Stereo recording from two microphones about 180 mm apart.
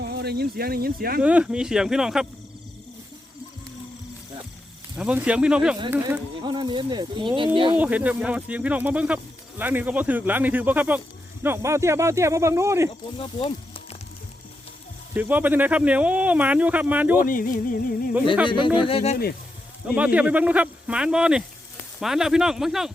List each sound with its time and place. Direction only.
0.0 s speech: 65° right (ahead or behind)
1.2 s speech: 5° right (ahead or behind)
4.9 s speech: 5° right (ahead or behind)
6.4 s speech: 25° right (ahead or behind)
7.7 s speech: 10° right (ahead or behind)
13.1 s speech: 30° left (ahead or behind)
15.1 s speech: 10° right (ahead or behind)
17.2 s a sound: 50° left (ahead or behind)
18.4 s speech: 25° left (ahead or behind)
20.0 s speech: 5° right (ahead or behind)